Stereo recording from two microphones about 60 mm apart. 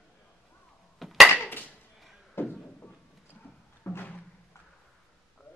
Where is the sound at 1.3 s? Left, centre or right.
Left.